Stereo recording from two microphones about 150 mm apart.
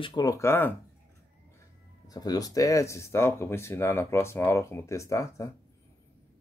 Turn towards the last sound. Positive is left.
turn(degrees=20)  # may be behind; listen again after turning